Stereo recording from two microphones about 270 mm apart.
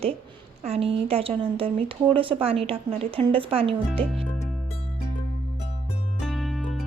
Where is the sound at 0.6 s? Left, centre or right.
Right.